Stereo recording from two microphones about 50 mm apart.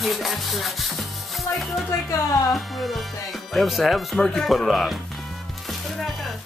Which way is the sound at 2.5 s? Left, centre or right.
Centre.